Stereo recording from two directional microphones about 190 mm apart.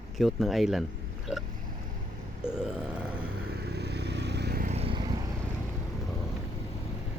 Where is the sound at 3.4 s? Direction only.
60° right (ahead or behind).